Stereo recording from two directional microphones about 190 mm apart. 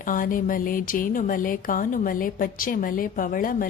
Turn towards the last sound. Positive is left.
turn(degrees=45)  # may be behind; listen again after turning